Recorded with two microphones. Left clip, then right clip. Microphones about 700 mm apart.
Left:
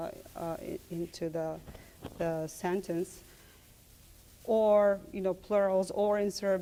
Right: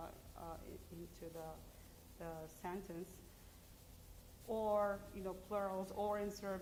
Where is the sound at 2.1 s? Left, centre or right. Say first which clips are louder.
Left 17 dB; left.